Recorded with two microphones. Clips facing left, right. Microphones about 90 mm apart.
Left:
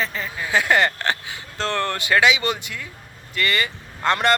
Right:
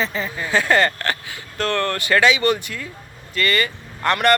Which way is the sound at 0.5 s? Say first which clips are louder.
Right 1 dB; 15° left (ahead or behind).